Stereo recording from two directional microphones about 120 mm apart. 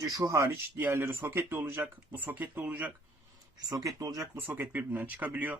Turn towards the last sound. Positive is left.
turn(degrees=-15)  # may be behind; listen again after turning